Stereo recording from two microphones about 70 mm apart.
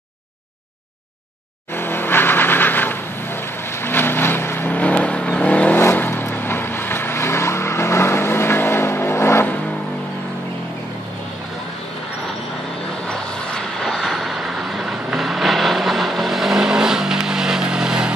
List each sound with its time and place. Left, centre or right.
1.8 s vehicle: left
5.8 s vehicle: left
13.1 s vehicle: centre
13.9 s vehicle: centre